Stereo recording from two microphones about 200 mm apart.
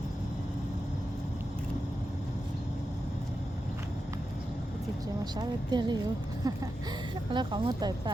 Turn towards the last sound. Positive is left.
turn(degrees=-20)  # may be behind; listen again after turning